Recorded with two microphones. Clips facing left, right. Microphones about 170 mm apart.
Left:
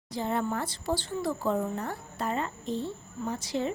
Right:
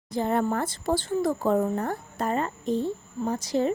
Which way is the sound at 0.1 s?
50° right (ahead or behind).